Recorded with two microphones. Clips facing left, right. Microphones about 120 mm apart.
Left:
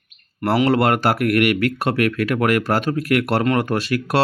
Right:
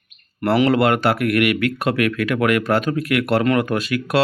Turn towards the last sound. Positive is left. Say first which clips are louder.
# even
turn(degrees=35)  # may be behind; listen again after turning